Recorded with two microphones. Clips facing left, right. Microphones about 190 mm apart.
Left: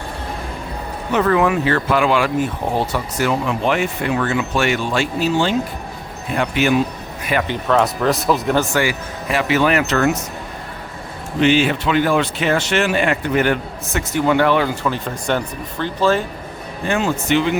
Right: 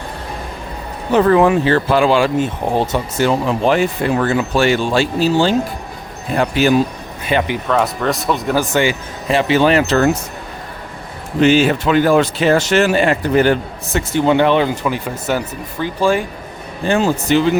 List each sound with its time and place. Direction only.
1.1 s speech: 30° right (ahead or behind)
7.3 s speech: 25° right (ahead or behind)
7.7 s speech: centre (ahead or behind)
8.7 s speech: 25° right (ahead or behind)
11.3 s speech: 40° right (ahead or behind); by 16.2 s 10° right (ahead or behind)
16.8 s speech: 35° right (ahead or behind)